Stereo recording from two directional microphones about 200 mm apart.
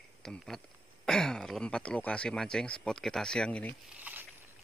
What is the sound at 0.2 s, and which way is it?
Speech, centre (ahead or behind).